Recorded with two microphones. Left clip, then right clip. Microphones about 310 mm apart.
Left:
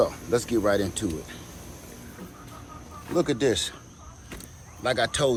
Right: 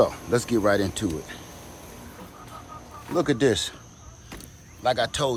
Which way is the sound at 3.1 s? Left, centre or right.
Right.